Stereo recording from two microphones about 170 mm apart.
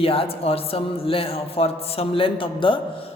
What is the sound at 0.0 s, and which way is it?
Speech, 35° left (ahead or behind).